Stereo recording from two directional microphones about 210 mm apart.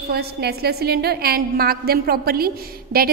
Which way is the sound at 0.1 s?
50° right (ahead or behind).